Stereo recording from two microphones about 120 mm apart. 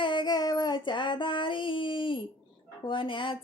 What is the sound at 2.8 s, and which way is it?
Speech, 45° left (ahead or behind).